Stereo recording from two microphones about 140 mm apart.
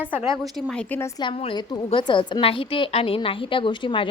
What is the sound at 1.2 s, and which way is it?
Speech, 40° left (ahead or behind).